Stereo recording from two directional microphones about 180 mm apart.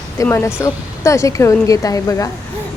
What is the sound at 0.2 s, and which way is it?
Speech, 15° left (ahead or behind).